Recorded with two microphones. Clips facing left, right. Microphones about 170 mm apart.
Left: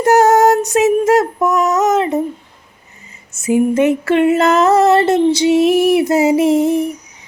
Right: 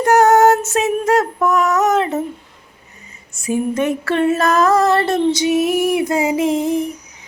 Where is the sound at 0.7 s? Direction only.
20° left (ahead or behind).